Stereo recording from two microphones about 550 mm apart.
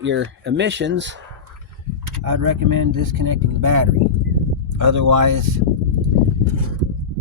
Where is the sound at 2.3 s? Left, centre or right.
Right.